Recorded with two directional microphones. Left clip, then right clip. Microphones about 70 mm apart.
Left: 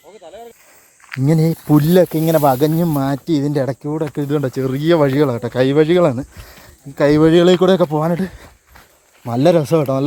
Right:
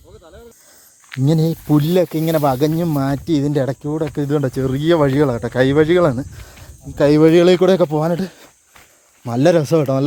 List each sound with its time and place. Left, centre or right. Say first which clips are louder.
1.2 s speech: left 1 dB; centre
1.8 s speech: left 4 dB; centre
2.0 s speech: left 3 dB; centre
3.3 s speech: right 1 dB; centre
4.1 s speech: even; right; by 5.3 s centre
5.5 s speech: left 1 dB; right
7.9 s speech: even; right